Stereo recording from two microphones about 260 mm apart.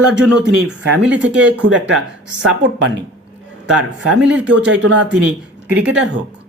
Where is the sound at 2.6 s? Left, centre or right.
Right.